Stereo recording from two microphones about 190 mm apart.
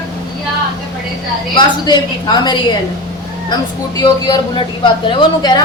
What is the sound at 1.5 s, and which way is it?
A woman's voice, 20° left (ahead or behind).